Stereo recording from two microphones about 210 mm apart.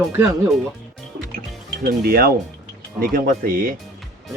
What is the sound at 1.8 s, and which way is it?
Speech, 45° right (ahead or behind).